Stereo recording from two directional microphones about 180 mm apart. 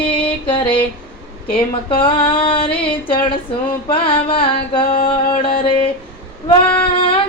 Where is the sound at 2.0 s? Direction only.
30° left (ahead or behind).